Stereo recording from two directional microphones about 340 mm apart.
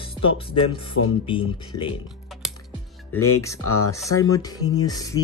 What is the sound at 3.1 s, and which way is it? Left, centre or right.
Speech, left.